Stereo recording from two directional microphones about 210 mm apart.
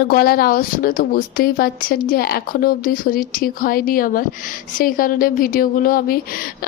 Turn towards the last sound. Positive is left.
turn(degrees=45)  # may be behind; listen again after turning